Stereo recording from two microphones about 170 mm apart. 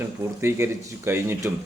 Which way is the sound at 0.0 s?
15° right (ahead or behind).